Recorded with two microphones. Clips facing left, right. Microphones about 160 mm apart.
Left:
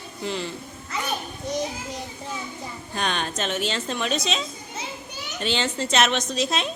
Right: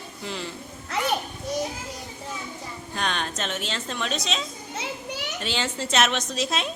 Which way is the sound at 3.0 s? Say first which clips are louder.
Left 2 dB; centre (ahead or behind).